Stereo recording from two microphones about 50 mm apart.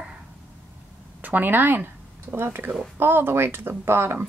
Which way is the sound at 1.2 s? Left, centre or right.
Right.